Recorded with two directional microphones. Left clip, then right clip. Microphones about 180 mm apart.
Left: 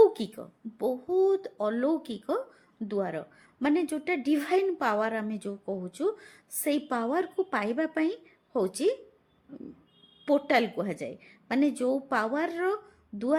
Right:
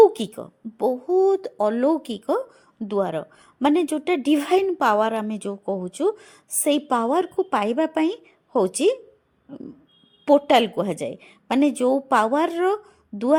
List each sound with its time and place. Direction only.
0.2 s a woman's voice: 35° right (ahead or behind)
10.2 s a woman's voice: 40° right (ahead or behind)